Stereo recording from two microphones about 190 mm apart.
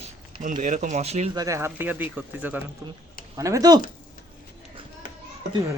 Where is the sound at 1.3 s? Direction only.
15° right (ahead or behind).